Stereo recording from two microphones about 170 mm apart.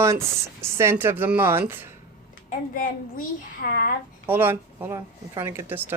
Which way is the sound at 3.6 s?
65° left (ahead or behind).